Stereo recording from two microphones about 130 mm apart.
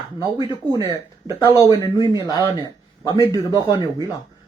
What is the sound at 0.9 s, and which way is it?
Speech, 30° left (ahead or behind).